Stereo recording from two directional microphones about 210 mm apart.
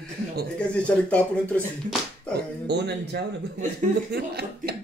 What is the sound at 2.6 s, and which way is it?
Speech, 55° right (ahead or behind).